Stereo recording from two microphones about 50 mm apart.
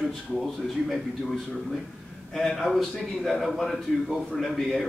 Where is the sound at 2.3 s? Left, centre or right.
Centre.